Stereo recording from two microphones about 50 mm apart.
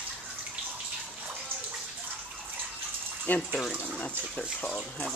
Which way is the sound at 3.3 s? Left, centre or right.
Left.